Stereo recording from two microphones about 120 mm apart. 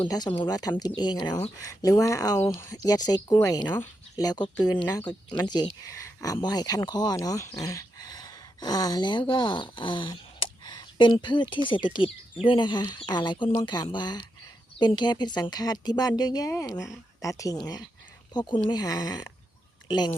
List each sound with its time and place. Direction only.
0.0 s speech: 35° left (ahead or behind)